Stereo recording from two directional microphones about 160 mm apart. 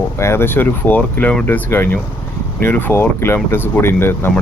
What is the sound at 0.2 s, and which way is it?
Speech, 15° left (ahead or behind).